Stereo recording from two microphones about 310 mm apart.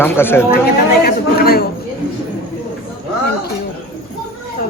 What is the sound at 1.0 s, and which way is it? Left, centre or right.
Speech, left.